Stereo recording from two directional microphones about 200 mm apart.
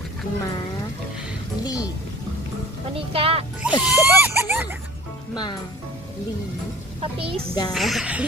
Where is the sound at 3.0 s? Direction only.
30° right (ahead or behind).